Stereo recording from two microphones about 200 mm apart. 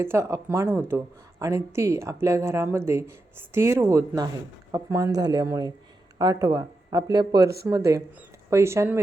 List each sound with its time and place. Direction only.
0.0 s a woman's voice: 15° right (ahead or behind)